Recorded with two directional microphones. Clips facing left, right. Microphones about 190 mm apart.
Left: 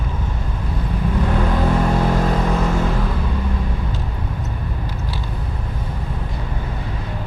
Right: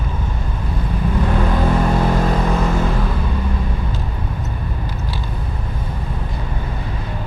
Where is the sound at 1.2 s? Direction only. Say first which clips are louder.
Right 1 dB; 20° right (ahead or behind).